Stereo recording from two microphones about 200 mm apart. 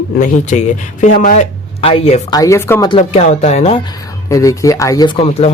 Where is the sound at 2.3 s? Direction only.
15° left (ahead or behind); by 3.8 s 35° left (ahead or behind).